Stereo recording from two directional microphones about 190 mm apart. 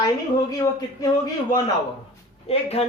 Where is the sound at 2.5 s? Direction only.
30° left (ahead or behind).